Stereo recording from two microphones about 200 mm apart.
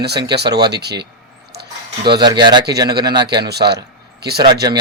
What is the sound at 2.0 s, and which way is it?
Speech, 20° right (ahead or behind).